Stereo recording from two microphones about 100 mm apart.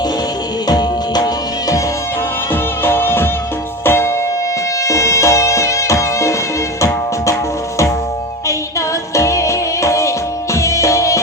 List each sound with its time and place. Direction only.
0.7 s music: 40° left (ahead or behind)
2.5 s music: 25° left (ahead or behind)
9.1 s music: 30° left (ahead or behind)